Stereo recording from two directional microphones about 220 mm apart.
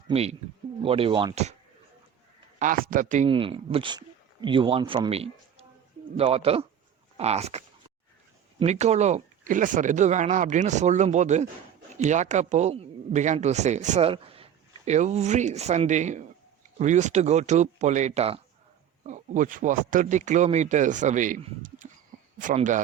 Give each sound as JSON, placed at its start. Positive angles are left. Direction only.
{"t": 0.1, "sound": "speech", "side_deg": -30}
{"t": 2.6, "sound": "speech", "side_deg": -40}
{"t": 3.2, "sound": "speech", "side_deg": -25}